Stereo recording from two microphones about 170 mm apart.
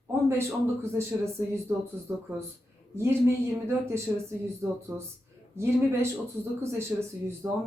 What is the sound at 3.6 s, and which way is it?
Speech, 15° right (ahead or behind).